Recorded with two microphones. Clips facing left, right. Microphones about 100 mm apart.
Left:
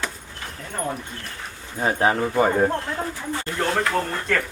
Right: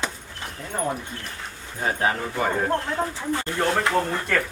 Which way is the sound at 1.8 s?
25° left (ahead or behind).